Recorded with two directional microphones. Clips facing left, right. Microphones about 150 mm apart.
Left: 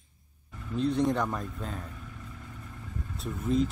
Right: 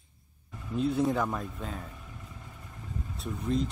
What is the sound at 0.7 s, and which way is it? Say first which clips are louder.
A man's voice: left 1 dB; 5° right (ahead or behind).